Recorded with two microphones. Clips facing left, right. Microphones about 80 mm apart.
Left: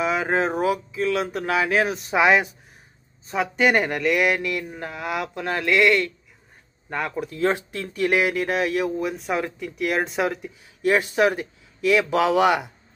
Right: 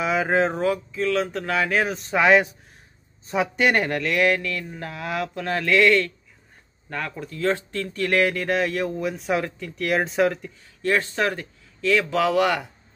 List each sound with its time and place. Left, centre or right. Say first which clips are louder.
0.0 s speech: right 1 dB; centre
10.8 s speech: left 3 dB; centre